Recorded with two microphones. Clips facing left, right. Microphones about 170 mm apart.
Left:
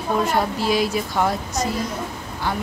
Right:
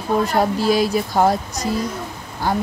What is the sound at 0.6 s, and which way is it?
Speech, 40° right (ahead or behind).